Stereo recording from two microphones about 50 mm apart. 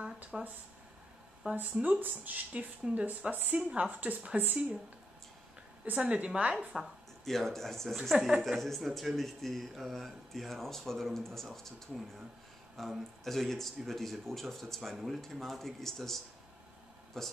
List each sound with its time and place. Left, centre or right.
0.3 s speech: centre
1.5 s speech: right
2.6 s speech: centre
3.1 s a woman's voice: right
4.4 s speech: right
5.9 s a woman's voice: right
6.7 s speech: centre
7.2 s a man's voice: centre
12.7 s a man's voice: centre